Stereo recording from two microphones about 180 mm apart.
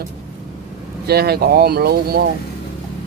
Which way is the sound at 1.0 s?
60° right (ahead or behind).